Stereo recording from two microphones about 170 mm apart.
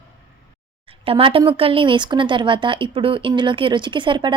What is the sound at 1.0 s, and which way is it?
A woman's voice, 30° right (ahead or behind).